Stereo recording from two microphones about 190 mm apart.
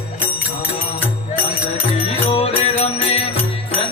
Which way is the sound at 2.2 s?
30° left (ahead or behind).